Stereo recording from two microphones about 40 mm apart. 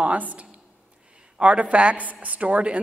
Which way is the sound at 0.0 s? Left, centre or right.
Right.